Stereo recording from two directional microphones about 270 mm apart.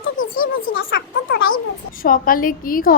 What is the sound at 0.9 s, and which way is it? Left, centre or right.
A woman's voice, left.